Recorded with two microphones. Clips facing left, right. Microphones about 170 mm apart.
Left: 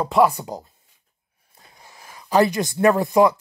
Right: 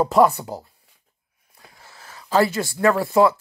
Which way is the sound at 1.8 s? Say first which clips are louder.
Left 1 dB; 15° left (ahead or behind).